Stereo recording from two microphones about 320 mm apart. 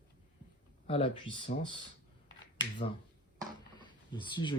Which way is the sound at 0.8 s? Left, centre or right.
Centre.